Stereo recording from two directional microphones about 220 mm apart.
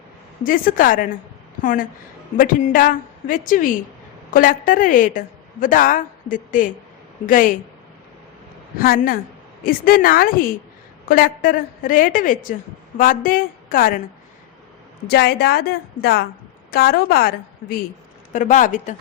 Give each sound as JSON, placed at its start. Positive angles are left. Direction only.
{"t": 0.4, "sound": "a woman's voice", "side_deg": 40}
{"t": 8.8, "sound": "a woman's voice", "side_deg": 40}
{"t": 15.0, "sound": "a woman's voice", "side_deg": 50}